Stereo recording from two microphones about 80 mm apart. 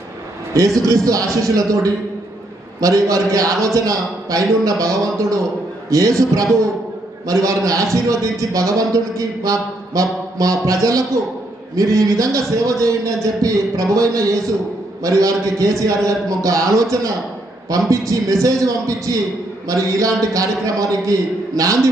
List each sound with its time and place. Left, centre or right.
0.5 s a man's voice: right